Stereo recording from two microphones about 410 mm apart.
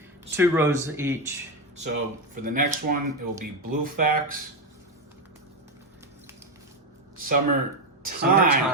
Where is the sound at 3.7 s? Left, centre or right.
Right.